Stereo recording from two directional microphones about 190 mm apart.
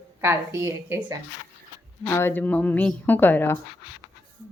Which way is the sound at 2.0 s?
15° left (ahead or behind).